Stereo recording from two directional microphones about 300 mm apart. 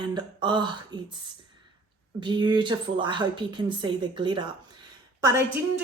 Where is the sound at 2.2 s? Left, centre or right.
Centre.